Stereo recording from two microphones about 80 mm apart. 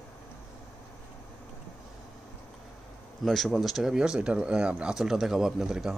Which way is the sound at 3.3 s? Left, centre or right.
Centre.